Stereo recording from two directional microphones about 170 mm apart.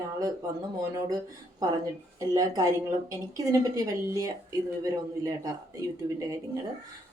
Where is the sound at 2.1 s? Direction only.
20° right (ahead or behind).